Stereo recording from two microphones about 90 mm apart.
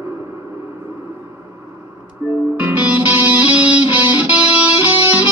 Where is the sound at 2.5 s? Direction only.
20° right (ahead or behind).